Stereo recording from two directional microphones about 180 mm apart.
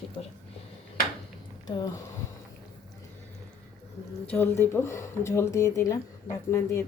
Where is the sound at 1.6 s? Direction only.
20° left (ahead or behind).